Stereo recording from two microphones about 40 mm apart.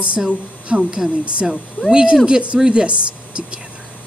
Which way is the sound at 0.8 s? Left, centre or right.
Centre.